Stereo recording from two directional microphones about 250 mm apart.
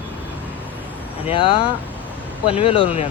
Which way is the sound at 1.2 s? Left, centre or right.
Left.